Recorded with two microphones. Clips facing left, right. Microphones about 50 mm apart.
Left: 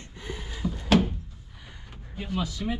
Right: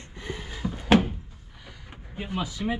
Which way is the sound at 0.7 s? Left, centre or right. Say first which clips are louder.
Right 2 dB; centre.